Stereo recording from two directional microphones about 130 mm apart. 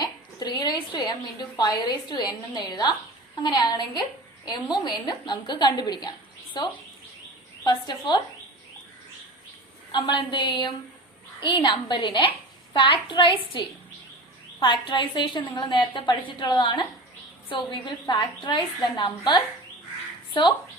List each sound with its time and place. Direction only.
0.0 s a woman's voice: 35° left (ahead or behind)
9.9 s a woman's voice: 35° left (ahead or behind)